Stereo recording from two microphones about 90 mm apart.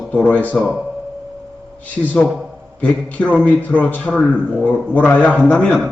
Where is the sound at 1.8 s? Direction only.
15° left (ahead or behind).